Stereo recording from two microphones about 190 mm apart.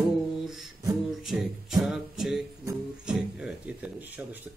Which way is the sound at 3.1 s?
5° right (ahead or behind).